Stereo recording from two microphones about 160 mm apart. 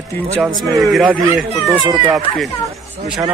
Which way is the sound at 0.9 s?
5° right (ahead or behind).